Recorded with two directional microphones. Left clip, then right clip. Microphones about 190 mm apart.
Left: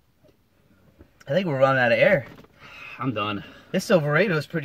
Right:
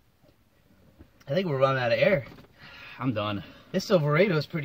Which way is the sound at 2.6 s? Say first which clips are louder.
Left 3 dB; 15° right (ahead or behind).